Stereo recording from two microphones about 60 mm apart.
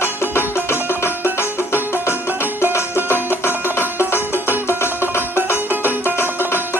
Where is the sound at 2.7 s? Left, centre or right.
Left.